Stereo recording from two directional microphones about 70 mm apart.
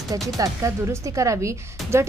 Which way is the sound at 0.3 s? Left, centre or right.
Right.